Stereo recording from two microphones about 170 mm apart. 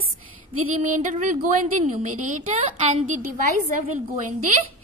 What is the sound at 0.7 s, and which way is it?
A woman's voice, 45° right (ahead or behind).